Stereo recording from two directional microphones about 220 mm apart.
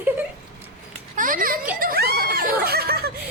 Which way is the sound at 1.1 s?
40° right (ahead or behind).